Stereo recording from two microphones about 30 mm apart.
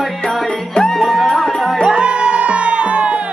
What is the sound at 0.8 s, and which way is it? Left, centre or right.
Music, centre.